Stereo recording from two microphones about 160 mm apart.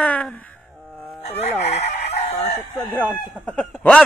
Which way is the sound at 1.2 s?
40° left (ahead or behind).